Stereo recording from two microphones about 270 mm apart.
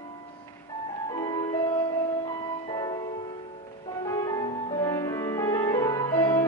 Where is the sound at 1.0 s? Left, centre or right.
Centre.